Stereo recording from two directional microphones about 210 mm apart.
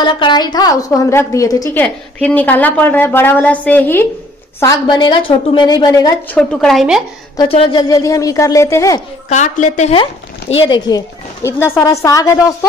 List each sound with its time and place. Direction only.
0.0 s a woman's voice: 20° left (ahead or behind)
6.3 s speech: 5° left (ahead or behind)
7.3 s a woman's voice: 25° left (ahead or behind)
9.3 s a woman's voice: 35° left (ahead or behind)
10.6 s a woman's voice: 20° left (ahead or behind)